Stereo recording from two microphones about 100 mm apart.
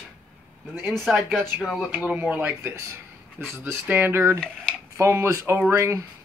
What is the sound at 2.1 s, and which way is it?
Speech, 15° right (ahead or behind).